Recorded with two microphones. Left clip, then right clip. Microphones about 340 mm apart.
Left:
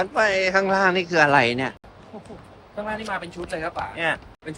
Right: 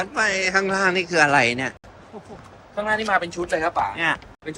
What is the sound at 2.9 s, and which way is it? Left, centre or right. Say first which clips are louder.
Speech: right 8 dB; right.